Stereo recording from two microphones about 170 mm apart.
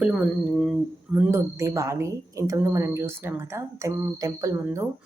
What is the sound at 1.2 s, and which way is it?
A woman's voice, 15° right (ahead or behind).